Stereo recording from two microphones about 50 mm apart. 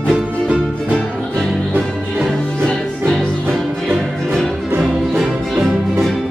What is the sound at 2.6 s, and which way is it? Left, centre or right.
Music, centre.